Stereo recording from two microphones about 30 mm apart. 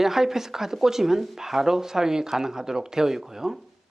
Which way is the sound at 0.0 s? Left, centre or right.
Centre.